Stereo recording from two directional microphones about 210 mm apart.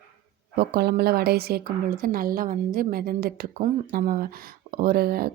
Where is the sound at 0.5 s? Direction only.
50° right (ahead or behind).